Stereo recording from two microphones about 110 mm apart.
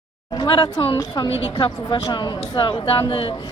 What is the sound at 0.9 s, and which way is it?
A woman's voice, 35° left (ahead or behind).